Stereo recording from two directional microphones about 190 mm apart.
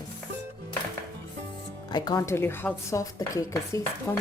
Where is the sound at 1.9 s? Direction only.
20° left (ahead or behind).